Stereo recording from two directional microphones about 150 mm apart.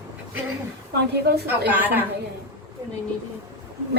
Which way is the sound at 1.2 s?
90° right.